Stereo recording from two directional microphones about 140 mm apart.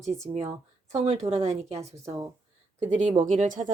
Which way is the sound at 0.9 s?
55° right (ahead or behind).